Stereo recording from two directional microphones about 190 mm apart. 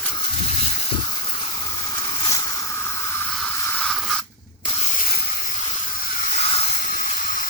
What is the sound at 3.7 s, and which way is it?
Spray, 5° left (ahead or behind).